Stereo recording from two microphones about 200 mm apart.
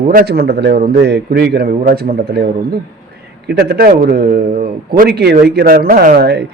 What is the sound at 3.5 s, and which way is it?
A man's voice, 55° right (ahead or behind).